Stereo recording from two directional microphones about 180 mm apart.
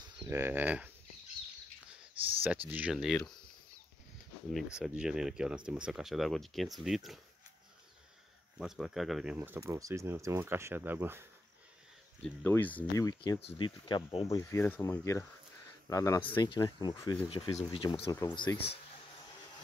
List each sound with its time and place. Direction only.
0.2 s speech: 10° right (ahead or behind)
2.7 s speech: 5° right (ahead or behind)
4.7 s speech: 5° right (ahead or behind)
8.5 s speech: centre (ahead or behind)
12.2 s speech: 10° left (ahead or behind); by 18.8 s 25° left (ahead or behind)